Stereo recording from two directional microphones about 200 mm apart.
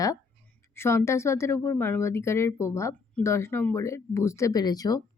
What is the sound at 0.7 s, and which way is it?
Speech, 10° left (ahead or behind).